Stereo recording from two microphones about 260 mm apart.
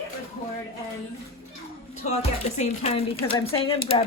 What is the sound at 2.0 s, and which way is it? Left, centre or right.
Speech, left.